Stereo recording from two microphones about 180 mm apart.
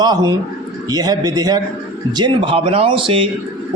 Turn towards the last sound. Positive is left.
turn(degrees=-30)  # may be behind; listen again after turning